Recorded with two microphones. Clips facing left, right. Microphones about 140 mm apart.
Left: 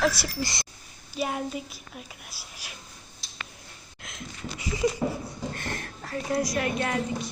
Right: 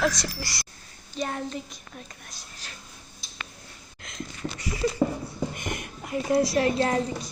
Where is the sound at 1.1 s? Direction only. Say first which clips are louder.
Left 1 dB; 10° left (ahead or behind).